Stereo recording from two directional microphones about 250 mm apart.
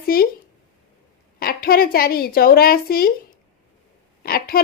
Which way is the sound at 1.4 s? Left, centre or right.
Left.